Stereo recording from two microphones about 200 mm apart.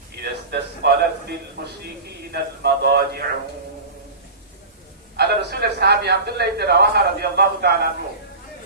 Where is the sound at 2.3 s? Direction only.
55° right (ahead or behind).